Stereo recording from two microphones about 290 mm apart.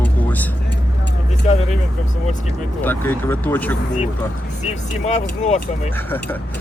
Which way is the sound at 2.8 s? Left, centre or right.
Centre.